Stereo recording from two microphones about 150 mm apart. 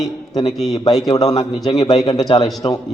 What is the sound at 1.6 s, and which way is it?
Speech, 25° left (ahead or behind).